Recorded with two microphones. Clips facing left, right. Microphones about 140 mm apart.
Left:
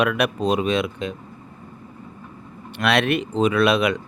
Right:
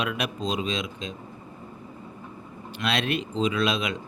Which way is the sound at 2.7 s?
65° left (ahead or behind).